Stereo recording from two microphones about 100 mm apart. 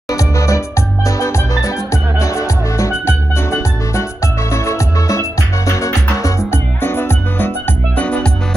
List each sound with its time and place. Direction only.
0.1 s music: 35° left (ahead or behind); by 8.3 s 15° left (ahead or behind)